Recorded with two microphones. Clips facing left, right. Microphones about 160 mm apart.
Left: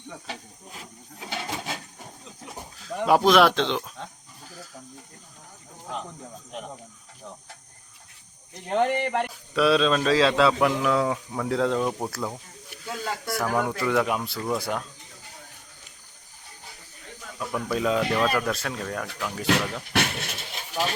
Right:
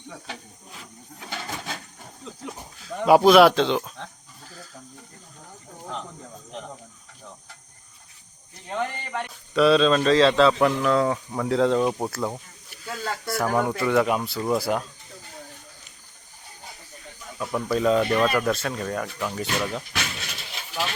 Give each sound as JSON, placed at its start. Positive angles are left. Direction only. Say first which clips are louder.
{"t": 1.2, "sound": "a sound", "louder": "left 2 dB", "side_deg": 15}
{"t": 2.8, "sound": "a man's voice", "louder": "right 4 dB", "side_deg": 0}
{"t": 8.7, "sound": "speech", "louder": "left 6 dB", "side_deg": 60}
{"t": 9.2, "sound": "a man's voice", "louder": "right 9 dB", "side_deg": 5}
{"t": 17.5, "sound": "a man's voice", "louder": "right 4 dB", "side_deg": 0}
{"t": 19.9, "sound": "vehicle", "louder": "left 6 dB", "side_deg": 60}